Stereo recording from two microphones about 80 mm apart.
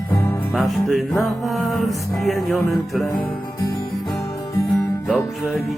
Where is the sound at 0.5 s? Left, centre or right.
Centre.